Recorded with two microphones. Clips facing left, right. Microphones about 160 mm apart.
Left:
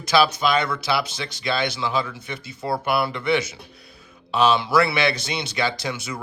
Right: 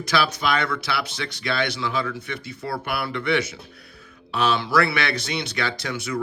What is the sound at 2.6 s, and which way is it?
Speech, 25° left (ahead or behind).